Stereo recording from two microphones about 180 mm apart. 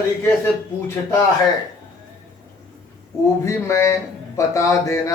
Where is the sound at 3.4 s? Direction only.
15° left (ahead or behind).